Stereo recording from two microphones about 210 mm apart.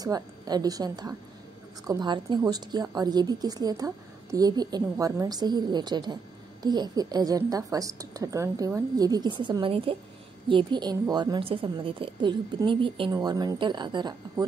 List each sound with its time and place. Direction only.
0.0 s a woman's voice: 20° right (ahead or behind)